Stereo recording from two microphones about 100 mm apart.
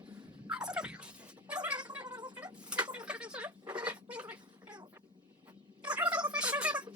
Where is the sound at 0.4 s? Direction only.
10° right (ahead or behind).